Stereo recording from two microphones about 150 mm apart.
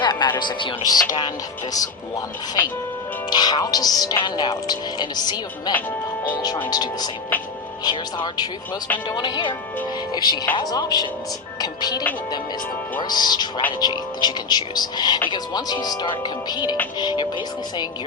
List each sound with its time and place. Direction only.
0.0 s speech: 30° left (ahead or behind)
3.2 s speech: 30° left (ahead or behind)